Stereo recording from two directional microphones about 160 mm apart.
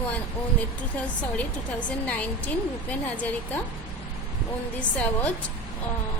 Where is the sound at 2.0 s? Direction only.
10° left (ahead or behind).